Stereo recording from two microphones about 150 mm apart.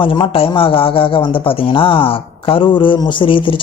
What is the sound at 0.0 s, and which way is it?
A man's voice, 35° left (ahead or behind).